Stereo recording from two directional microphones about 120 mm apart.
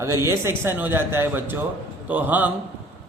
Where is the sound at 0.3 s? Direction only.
20° right (ahead or behind).